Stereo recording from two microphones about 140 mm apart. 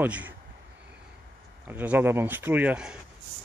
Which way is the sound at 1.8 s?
15° right (ahead or behind).